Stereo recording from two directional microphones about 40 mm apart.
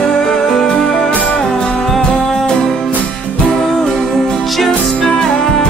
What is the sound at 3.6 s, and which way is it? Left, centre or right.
Music, centre.